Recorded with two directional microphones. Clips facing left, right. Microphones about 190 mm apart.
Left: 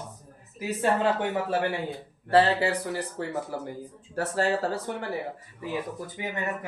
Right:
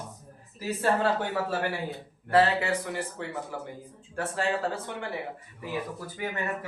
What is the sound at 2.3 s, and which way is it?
Speech, 35° left (ahead or behind).